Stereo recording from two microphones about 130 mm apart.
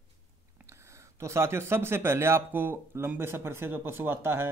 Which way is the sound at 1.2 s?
20° right (ahead or behind).